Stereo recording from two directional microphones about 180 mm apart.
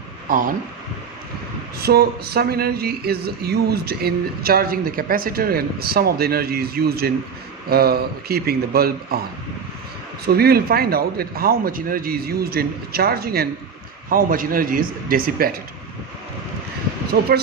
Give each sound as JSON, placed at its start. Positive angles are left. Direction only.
{"t": 0.3, "sound": "speech", "side_deg": -50}
{"t": 1.8, "sound": "speech", "side_deg": -60}
{"t": 10.2, "sound": "speech", "side_deg": -60}
{"t": 17.1, "sound": "speech", "side_deg": -60}